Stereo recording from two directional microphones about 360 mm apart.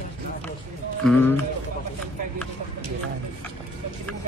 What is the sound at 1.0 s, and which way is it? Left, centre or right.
Speech, centre.